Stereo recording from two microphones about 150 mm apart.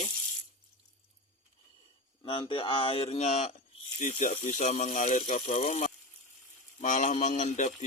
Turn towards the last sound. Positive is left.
turn(degrees=55)  # may be behind; listen again after turning